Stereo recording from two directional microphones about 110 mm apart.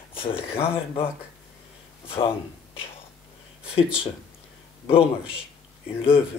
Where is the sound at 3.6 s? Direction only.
55° left (ahead or behind).